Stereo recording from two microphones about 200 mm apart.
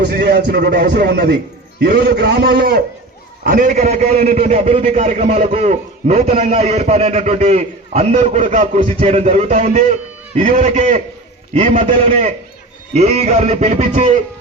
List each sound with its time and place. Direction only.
0.0 s a man's voice: 50° right (ahead or behind); by 14.2 s 35° right (ahead or behind)